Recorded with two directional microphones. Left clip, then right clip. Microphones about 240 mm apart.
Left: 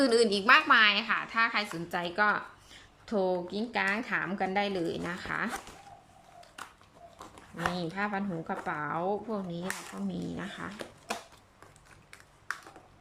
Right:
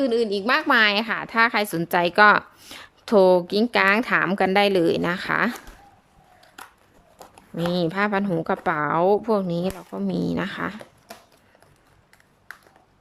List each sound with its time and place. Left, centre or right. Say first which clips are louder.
0.0 s a woman's voice: right 3 dB; centre; by 5.5 s right
7.2 s a sound: right 4 dB; centre
7.7 s a woman's voice: right 14 dB; right